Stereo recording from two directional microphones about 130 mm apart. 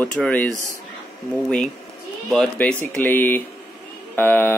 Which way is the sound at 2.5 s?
10° left (ahead or behind).